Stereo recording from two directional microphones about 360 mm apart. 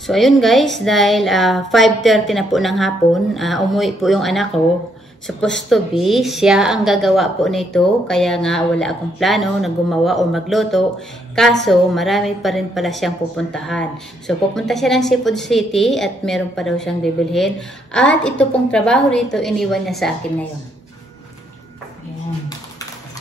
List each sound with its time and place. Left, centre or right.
0.0 s a woman's voice: centre